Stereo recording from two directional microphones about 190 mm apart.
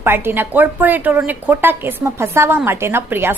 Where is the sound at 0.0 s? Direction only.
10° right (ahead or behind).